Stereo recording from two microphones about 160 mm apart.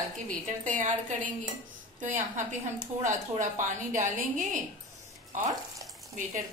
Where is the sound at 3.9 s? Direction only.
55° right (ahead or behind).